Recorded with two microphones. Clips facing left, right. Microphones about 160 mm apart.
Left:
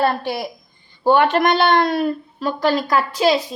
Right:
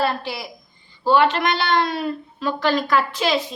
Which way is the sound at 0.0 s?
55° left (ahead or behind).